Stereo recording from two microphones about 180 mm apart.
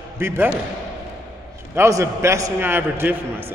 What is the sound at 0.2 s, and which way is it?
Speech, 10° right (ahead or behind).